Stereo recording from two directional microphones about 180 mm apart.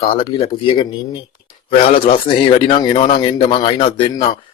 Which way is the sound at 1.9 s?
30° left (ahead or behind).